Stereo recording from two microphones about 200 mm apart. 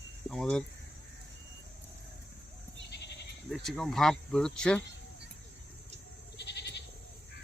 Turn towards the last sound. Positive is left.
turn(degrees=55)  # may be behind; listen again after turning